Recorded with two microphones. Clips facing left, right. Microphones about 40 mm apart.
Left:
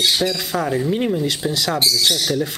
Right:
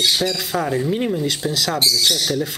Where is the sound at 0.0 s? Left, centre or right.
Centre.